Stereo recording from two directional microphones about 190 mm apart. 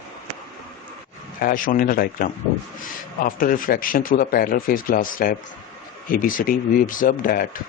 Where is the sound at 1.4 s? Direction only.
50° left (ahead or behind).